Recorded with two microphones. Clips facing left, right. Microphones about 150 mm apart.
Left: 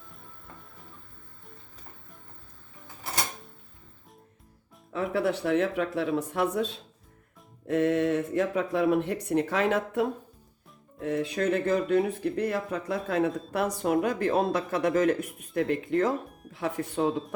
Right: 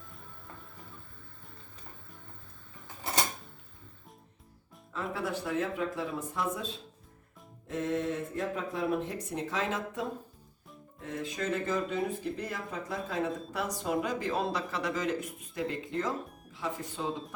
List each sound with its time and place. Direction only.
4.9 s speech: 70° left (ahead or behind)